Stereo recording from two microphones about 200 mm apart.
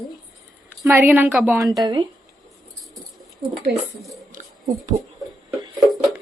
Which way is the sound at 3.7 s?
55° right (ahead or behind).